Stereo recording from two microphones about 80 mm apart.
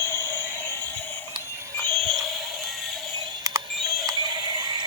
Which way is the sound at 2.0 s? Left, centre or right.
Centre.